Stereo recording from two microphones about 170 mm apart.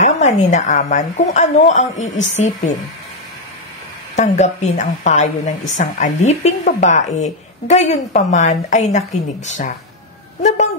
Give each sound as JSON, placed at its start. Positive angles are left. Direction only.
{"t": 0.0, "sound": "a woman's voice", "side_deg": 45}
{"t": 4.2, "sound": "a woman's voice", "side_deg": 40}